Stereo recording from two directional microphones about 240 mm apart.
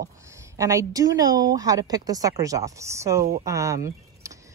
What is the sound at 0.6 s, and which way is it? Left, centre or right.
Speech, centre.